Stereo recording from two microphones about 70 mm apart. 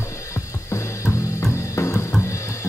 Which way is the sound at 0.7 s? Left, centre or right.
Left.